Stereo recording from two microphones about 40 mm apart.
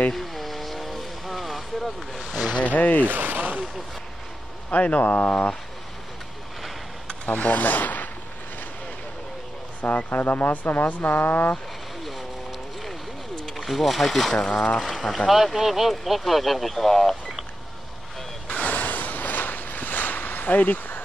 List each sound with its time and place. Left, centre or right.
0.1 s vehicle: centre
2.6 s speech: left
3.1 s speech: right
4.6 s speech: left
5.3 s speech: left
7.2 s speech: left
9.8 s speech: left
13.6 s speech: centre
14.5 s speech: left
14.8 s speech: centre
15.2 s speech: centre
18.5 s a sound: left